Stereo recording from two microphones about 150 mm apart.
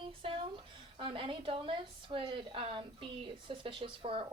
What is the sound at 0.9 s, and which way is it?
A woman's voice, 35° right (ahead or behind).